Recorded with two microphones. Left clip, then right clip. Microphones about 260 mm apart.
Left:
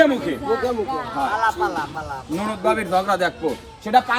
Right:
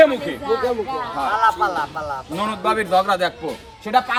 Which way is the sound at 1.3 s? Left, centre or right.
Right.